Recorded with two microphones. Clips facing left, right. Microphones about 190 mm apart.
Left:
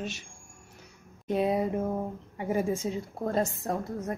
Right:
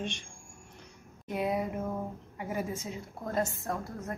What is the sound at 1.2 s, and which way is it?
A woman's voice, 25° left (ahead or behind).